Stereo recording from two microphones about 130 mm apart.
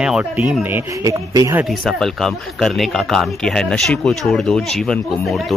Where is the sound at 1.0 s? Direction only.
25° right (ahead or behind).